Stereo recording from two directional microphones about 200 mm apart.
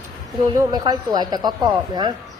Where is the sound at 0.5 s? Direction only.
15° right (ahead or behind).